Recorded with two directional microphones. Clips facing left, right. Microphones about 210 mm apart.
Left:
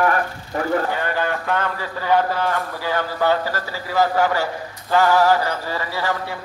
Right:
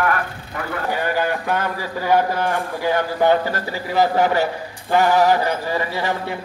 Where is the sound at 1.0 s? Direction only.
10° right (ahead or behind).